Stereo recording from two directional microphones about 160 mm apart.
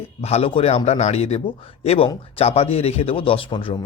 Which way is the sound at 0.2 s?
40° left (ahead or behind).